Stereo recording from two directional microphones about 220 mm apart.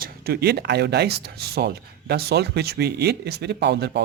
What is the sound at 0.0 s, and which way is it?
Speech, 45° right (ahead or behind).